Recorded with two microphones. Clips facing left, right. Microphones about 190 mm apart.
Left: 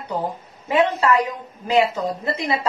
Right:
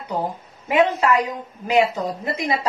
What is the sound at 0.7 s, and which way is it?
Speech, 15° right (ahead or behind).